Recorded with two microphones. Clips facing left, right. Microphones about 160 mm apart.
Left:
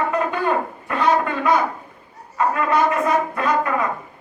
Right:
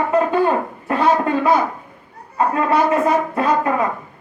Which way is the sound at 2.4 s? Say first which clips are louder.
Right 2 dB; 30° right (ahead or behind).